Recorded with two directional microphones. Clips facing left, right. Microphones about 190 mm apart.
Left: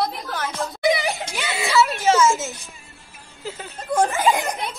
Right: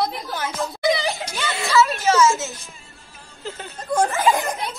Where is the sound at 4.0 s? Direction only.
15° left (ahead or behind).